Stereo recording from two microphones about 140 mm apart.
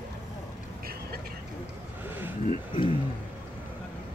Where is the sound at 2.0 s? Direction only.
15° right (ahead or behind).